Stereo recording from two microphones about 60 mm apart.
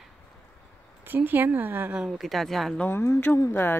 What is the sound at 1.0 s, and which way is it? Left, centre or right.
Speech, right.